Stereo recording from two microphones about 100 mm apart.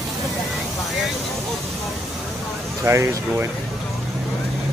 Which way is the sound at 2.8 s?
25° right (ahead or behind).